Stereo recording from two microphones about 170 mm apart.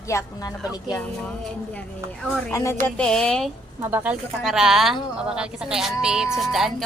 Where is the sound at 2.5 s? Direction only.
15° left (ahead or behind).